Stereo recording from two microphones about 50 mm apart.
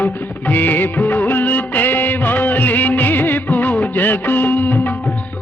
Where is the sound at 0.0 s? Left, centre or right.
Left.